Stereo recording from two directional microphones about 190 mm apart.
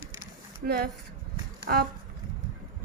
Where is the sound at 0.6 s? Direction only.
55° right (ahead or behind).